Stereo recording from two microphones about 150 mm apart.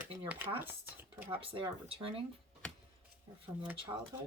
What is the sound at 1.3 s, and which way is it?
Speech, 35° right (ahead or behind).